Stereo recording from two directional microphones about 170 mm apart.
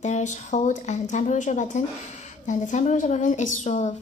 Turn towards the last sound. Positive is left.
turn(degrees=45)  # may be behind; listen again after turning